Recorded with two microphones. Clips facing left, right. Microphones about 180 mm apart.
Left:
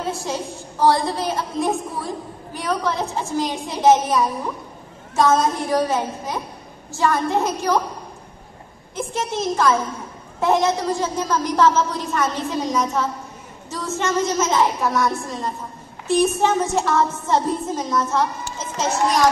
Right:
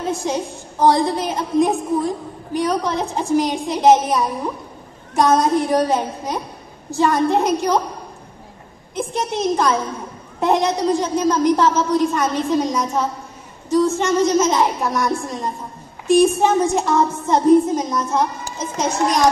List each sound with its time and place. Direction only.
0.1 s a woman's voice: 20° right (ahead or behind)
8.9 s a woman's voice: 15° right (ahead or behind)